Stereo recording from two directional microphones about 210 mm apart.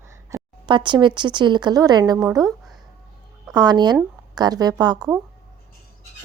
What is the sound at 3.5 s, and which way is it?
A woman's voice, 20° right (ahead or behind).